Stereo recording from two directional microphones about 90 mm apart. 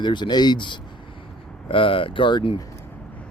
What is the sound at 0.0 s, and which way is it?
Speech, 55° left (ahead or behind).